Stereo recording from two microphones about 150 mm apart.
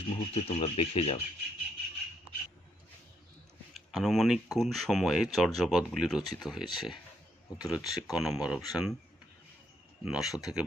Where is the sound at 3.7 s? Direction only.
Centre (ahead or behind).